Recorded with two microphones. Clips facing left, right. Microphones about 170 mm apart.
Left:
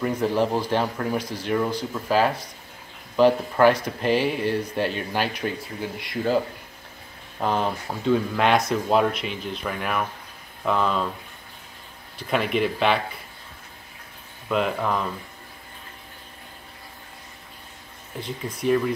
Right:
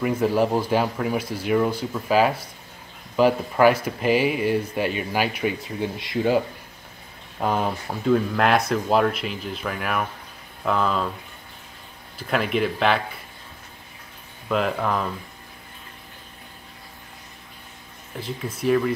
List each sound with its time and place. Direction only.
0.0 s speech: 5° right (ahead or behind)
5.8 s speech: 25° right (ahead or behind)
7.3 s speech: 5° right (ahead or behind)
12.2 s speech: centre (ahead or behind)
14.5 s speech: centre (ahead or behind)
18.2 s speech: centre (ahead or behind)